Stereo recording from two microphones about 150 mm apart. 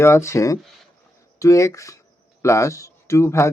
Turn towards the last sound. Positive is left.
turn(degrees=20)  # may be behind; listen again after turning